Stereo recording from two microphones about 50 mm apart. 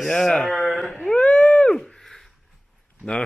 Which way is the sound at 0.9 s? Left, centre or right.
Left.